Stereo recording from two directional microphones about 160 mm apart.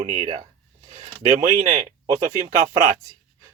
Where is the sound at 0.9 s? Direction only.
40° right (ahead or behind).